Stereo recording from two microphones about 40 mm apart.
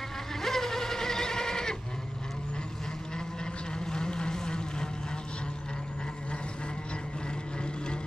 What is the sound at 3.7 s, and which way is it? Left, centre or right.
Vehicle, centre.